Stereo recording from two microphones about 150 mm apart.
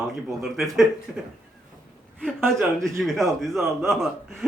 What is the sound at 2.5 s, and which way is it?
A man's voice, centre (ahead or behind).